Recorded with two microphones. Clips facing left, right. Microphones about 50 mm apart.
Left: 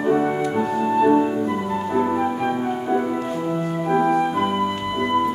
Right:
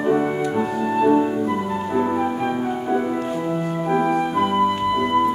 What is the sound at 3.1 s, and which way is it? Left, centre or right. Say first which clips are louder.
Music: right 1 dB; centre.